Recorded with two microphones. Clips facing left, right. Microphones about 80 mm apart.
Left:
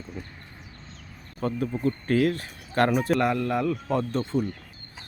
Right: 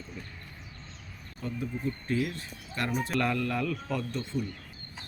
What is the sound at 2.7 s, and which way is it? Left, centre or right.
Speech, left.